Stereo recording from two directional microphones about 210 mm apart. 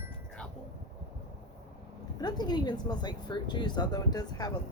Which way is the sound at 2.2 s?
20° left (ahead or behind).